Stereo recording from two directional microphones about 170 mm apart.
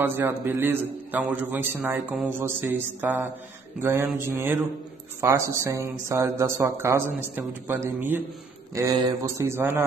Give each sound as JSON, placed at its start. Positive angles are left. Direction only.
{"t": 0.0, "sound": "a man's voice", "side_deg": -15}